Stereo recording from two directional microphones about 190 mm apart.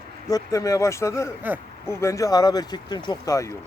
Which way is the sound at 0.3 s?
20° left (ahead or behind).